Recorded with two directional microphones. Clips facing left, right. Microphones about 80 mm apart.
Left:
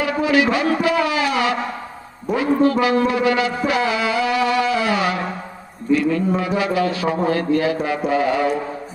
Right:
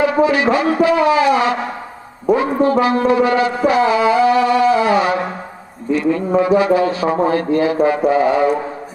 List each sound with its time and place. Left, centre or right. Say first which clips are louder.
0.0 s speech: right 4 dB; right